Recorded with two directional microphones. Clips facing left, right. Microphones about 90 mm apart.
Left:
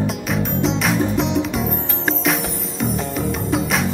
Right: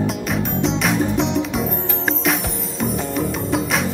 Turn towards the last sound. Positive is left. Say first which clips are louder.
# even
turn(degrees=0)  # may be behind; listen again after turning